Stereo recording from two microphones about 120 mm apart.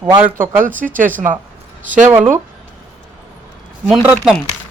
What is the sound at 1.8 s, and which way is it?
Speech, 90° right.